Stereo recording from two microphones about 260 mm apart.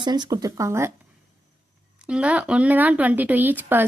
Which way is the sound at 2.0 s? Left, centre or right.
Centre.